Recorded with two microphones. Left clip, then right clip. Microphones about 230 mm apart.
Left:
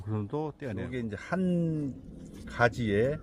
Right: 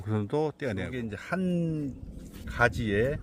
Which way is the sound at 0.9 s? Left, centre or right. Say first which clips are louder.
Even; centre.